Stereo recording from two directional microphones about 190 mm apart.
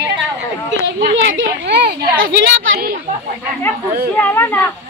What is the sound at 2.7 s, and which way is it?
Speech, 55° right (ahead or behind).